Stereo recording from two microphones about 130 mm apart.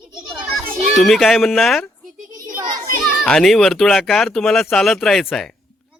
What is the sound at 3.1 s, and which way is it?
Speech, 5° left (ahead or behind).